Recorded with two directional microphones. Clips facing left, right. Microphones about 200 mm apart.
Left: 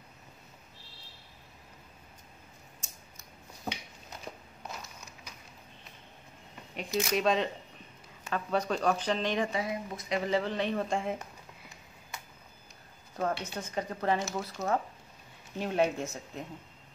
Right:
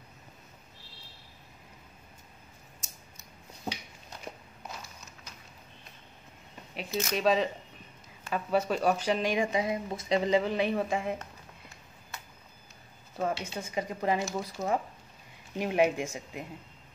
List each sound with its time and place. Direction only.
4.3 s crushing: 20° right (ahead or behind)
6.9 s speech: 10° left (ahead or behind)
7.2 s speech: centre (ahead or behind)
13.1 s speech: 5° right (ahead or behind)